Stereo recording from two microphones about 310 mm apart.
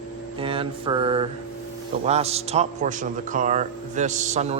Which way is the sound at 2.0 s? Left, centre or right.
Centre.